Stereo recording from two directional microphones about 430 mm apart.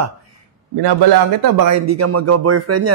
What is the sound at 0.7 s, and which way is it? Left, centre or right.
Speech, right.